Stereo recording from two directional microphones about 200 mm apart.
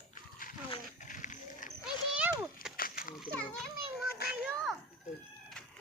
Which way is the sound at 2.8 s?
45° left (ahead or behind).